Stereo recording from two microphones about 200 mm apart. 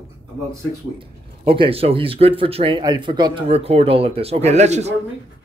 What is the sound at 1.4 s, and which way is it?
Speech, 25° right (ahead or behind).